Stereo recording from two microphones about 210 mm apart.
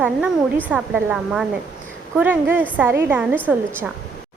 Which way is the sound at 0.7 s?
5° right (ahead or behind).